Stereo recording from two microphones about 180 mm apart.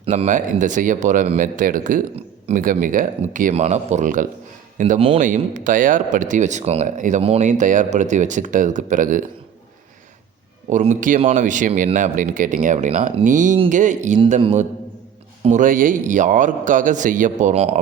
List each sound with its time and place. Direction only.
0.1 s a man's voice: 45° right (ahead or behind)
10.7 s a man's voice: 45° right (ahead or behind)